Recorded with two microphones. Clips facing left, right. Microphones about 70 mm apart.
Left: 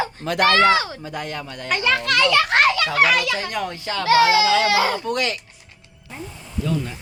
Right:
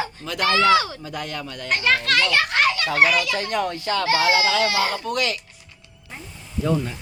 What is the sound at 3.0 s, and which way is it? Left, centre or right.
Speech, left.